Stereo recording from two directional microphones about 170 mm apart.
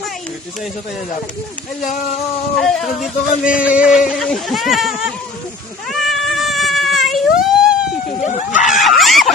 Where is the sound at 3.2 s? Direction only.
50° left (ahead or behind).